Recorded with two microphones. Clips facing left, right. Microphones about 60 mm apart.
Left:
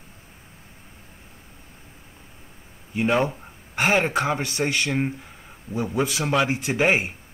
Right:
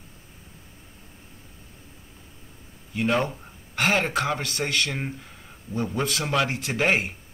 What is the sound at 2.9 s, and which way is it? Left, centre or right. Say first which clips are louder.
Speech: left 2 dB; centre.